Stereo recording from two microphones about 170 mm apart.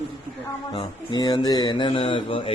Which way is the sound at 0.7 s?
25° left (ahead or behind).